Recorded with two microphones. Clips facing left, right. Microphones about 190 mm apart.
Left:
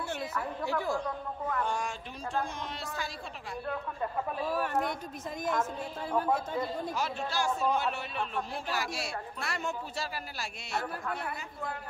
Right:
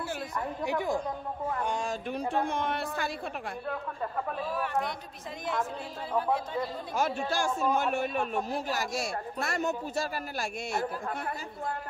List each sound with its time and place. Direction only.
0.7 s a woman's voice: 15° right (ahead or behind)
1.6 s a sound: 20° right (ahead or behind)
2.0 s speech: 60° right (ahead or behind)
4.5 s a man's voice: 40° left (ahead or behind)
6.9 s speech: 50° right (ahead or behind)